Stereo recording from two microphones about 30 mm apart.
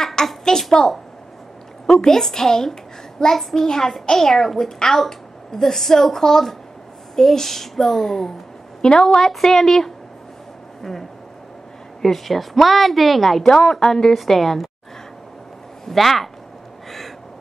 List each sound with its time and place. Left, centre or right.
0.5 s a woman's voice: centre
8.8 s a woman's voice: left
9.4 s a woman's voice: centre
13.5 s a woman's voice: left
14.2 s a woman's voice: centre
15.8 s speech: centre